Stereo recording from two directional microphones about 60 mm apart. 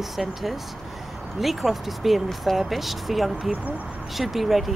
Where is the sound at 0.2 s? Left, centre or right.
Centre.